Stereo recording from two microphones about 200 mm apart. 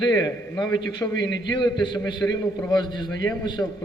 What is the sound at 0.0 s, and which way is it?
A man's voice, 20° left (ahead or behind).